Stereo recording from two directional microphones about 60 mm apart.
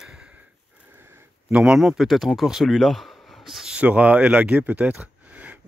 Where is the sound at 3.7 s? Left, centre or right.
Right.